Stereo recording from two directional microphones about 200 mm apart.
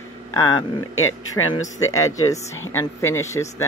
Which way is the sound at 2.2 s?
15° left (ahead or behind).